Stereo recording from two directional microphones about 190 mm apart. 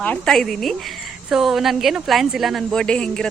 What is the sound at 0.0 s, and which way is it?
A woman's voice, 5° left (ahead or behind).